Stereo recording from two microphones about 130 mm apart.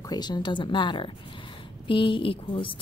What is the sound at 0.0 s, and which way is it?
A woman's voice, 30° left (ahead or behind).